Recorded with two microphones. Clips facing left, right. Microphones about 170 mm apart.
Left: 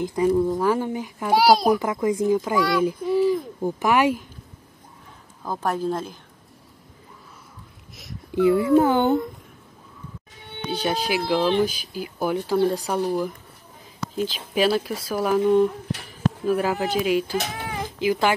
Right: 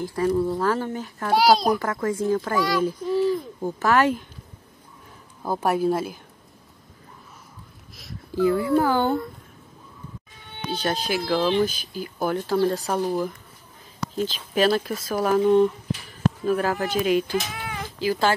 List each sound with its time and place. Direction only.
0.0 s a child's voice: 20° left (ahead or behind)
5.4 s a woman's voice: 10° right (ahead or behind)
8.4 s a child's voice: 20° left (ahead or behind)
10.7 s a child's voice: 15° left (ahead or behind)
12.8 s a child's voice: centre (ahead or behind)
17.9 s speech: 20° left (ahead or behind)